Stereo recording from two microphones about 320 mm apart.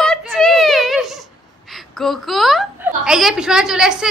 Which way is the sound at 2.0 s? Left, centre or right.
Centre.